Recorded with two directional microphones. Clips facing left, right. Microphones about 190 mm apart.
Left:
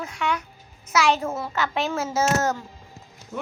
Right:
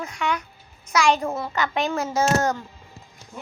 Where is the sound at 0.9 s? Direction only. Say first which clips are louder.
Right 1 dB; 5° left (ahead or behind).